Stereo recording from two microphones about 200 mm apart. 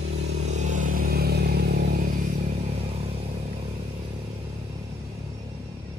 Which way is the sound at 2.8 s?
30° right (ahead or behind).